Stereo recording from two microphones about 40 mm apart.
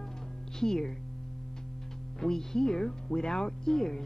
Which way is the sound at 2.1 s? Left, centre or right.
Centre.